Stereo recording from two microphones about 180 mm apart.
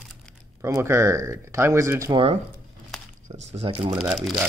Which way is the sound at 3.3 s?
35° right (ahead or behind).